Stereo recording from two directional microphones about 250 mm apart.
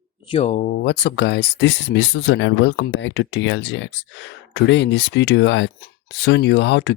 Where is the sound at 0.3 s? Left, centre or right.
Left.